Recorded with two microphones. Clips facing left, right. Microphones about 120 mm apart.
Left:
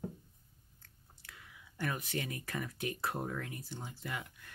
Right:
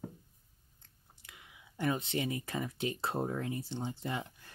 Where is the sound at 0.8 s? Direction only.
20° right (ahead or behind).